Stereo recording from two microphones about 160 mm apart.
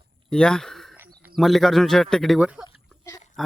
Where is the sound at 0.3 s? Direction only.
5° left (ahead or behind).